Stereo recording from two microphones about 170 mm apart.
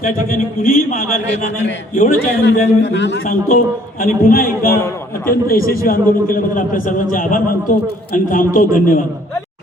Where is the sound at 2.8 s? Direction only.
90° left.